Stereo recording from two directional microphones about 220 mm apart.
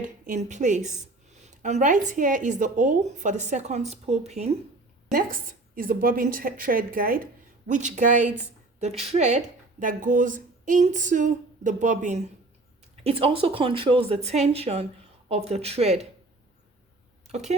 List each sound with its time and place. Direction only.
0.0 s a woman's voice: 35° right (ahead or behind)
5.1 s a woman's voice: 40° right (ahead or behind)
17.2 s a sound: 30° right (ahead or behind)